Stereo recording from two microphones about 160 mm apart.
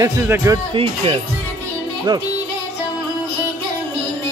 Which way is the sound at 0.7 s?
35° right (ahead or behind).